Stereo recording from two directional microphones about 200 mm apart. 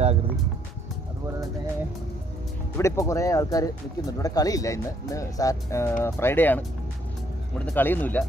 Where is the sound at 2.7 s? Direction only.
15° left (ahead or behind).